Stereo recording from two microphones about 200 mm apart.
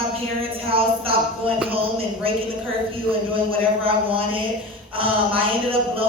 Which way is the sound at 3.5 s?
25° right (ahead or behind).